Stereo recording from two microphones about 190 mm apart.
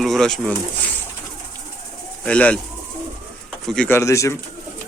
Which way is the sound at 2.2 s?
5° left (ahead or behind).